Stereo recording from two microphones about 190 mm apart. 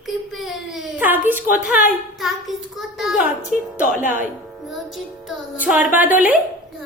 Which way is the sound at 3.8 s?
45° left (ahead or behind).